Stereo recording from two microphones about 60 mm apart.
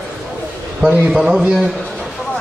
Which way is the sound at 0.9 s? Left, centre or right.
Right.